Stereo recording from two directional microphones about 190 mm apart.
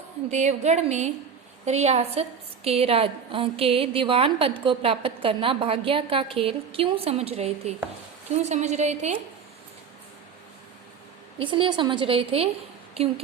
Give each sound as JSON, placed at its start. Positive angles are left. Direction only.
{"t": 0.3, "sound": "a woman's voice", "side_deg": -35}
{"t": 11.3, "sound": "a woman's voice", "side_deg": -25}